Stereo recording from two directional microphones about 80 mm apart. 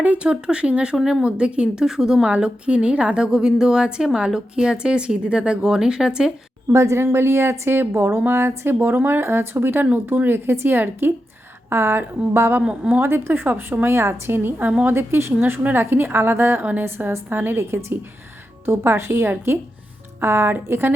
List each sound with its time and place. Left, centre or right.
0.0 s a woman's voice: centre
0.9 s speech: centre
1.2 s a woman's voice: centre
6.7 s a woman's voice: right
12.6 s a woman's voice: centre
13.0 s a woman's voice: right